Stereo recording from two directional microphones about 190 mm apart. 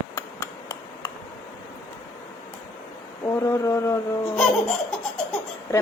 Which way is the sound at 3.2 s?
15° left (ahead or behind).